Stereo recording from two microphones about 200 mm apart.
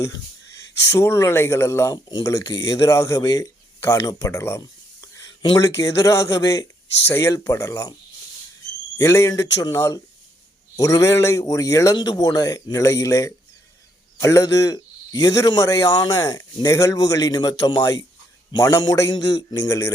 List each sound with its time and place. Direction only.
0.9 s speech: 15° left (ahead or behind)
9.0 s speech: 15° left (ahead or behind)